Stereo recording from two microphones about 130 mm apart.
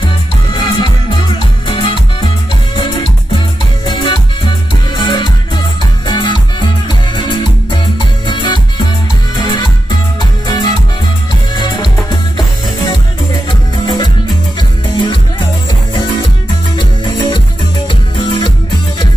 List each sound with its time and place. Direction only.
0.0 s music: 35° left (ahead or behind)
1.7 s salsa music: 40° left (ahead or behind)
3.8 s music: 35° left (ahead or behind)
10.4 s music: 35° left (ahead or behind)
16.7 s music: 35° left (ahead or behind)